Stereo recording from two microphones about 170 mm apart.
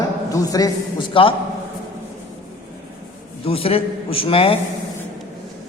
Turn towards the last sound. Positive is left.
turn(degrees=35)  # may be behind; listen again after turning